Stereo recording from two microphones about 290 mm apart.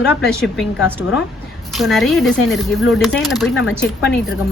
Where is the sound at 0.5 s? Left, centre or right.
Centre.